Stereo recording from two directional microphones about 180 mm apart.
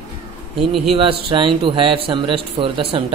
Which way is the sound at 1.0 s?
30° right (ahead or behind).